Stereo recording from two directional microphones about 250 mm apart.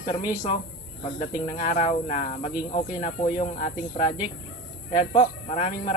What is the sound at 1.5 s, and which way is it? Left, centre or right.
Speech, left.